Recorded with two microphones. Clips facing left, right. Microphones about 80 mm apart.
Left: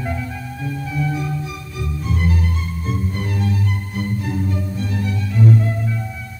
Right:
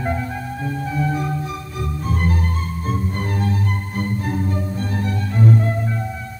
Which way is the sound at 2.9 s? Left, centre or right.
Right.